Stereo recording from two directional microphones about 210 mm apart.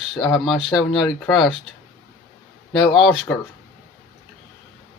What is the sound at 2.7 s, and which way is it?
Speech, centre (ahead or behind).